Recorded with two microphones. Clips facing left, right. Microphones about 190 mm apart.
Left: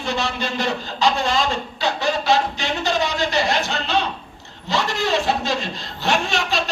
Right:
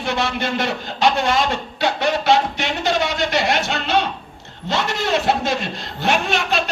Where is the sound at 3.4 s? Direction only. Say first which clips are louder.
Right 2 dB; 55° right (ahead or behind).